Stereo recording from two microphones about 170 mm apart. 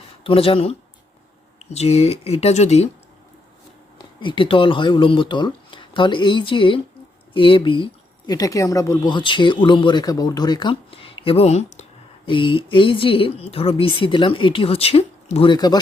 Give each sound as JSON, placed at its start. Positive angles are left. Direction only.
{"t": 0.3, "sound": "speech", "side_deg": 35}
{"t": 3.9, "sound": "speech", "side_deg": 30}